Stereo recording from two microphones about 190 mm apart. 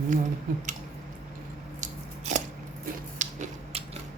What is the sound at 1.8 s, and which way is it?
Scissors, 40° right (ahead or behind).